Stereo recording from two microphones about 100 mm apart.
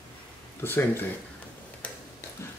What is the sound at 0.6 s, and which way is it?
Speech, 20° left (ahead or behind).